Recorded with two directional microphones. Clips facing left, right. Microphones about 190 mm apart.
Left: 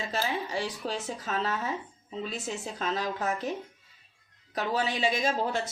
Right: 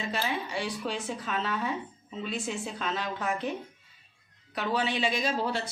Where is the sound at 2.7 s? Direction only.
35° left (ahead or behind).